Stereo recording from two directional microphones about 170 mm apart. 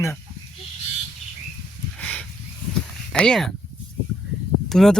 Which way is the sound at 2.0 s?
10° left (ahead or behind).